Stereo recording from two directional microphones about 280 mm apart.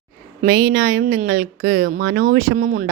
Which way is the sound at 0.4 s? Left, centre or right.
Right.